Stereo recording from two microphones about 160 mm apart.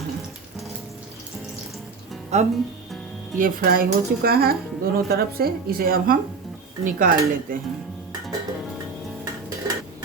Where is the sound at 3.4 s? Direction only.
65° right (ahead or behind).